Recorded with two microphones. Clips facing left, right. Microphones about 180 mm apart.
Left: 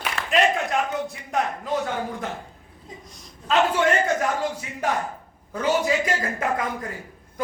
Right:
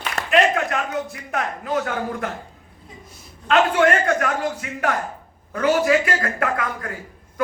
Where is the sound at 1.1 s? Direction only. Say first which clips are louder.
Left 1 dB; 65° right (ahead or behind).